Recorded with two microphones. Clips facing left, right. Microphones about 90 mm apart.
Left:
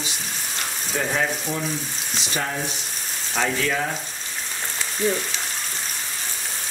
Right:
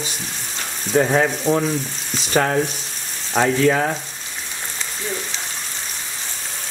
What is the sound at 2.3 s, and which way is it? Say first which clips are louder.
Speech: right 10 dB; 60° right (ahead or behind).